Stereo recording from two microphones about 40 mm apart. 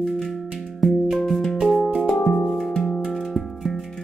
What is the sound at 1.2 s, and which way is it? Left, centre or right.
Music, centre.